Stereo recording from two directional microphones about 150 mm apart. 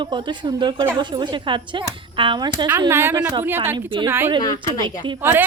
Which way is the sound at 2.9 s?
15° right (ahead or behind).